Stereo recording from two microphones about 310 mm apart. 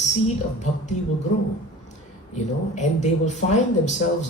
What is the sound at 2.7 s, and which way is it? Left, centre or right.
Speech, left.